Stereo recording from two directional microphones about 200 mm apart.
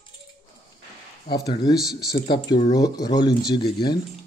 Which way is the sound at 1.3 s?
20° left (ahead or behind).